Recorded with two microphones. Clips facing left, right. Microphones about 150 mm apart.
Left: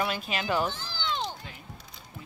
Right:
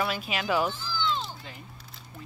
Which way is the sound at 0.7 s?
65° left (ahead or behind).